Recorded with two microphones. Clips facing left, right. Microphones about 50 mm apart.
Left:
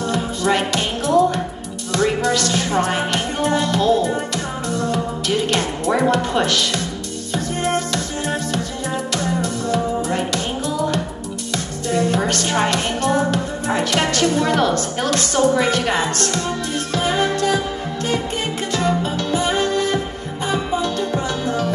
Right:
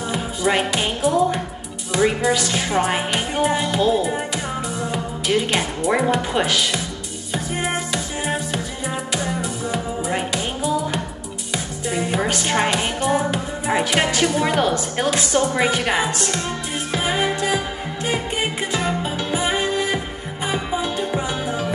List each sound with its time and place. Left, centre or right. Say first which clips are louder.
0.0 s music: left 2 dB; centre
1.9 s speech: even; centre
4.6 s music: left 4 dB; centre
5.5 s speech: left 1 dB; centre
7.3 s music: left 3 dB; centre
12.4 s speech: left 1 dB; right
16.9 s music: left 2 dB; centre